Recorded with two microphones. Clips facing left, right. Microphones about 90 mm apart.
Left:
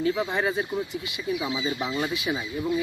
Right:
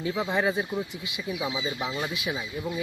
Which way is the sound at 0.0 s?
10° right (ahead or behind).